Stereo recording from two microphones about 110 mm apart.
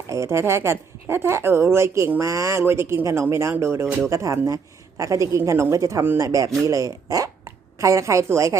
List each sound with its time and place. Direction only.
0.1 s a woman's voice: 25° right (ahead or behind)